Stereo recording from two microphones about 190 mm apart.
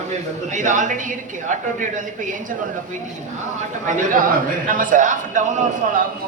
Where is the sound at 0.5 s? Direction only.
40° right (ahead or behind).